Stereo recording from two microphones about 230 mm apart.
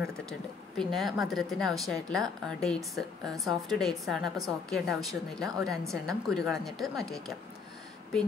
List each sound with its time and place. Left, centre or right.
0.0 s a woman's voice: centre